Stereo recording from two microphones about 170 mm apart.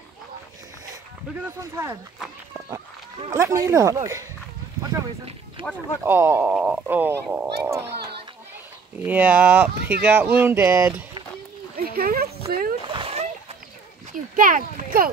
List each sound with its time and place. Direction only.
1.6 s speech: 15° right (ahead or behind)
3.3 s speech: 20° right (ahead or behind)
5.6 s speech: 30° right (ahead or behind)
6.0 s speech: 15° right (ahead or behind)
8.9 s speech: 10° right (ahead or behind)
11.7 s a sound: 60° right (ahead or behind)
12.8 s splash: 30° right (ahead or behind)
14.3 s speech: 55° right (ahead or behind)